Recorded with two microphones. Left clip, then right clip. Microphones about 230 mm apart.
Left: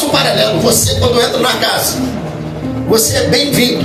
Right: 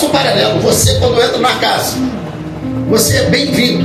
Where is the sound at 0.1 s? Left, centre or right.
Left.